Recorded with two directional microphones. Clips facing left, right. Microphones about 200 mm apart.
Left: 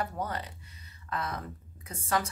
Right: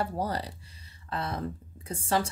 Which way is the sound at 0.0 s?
30° right (ahead or behind).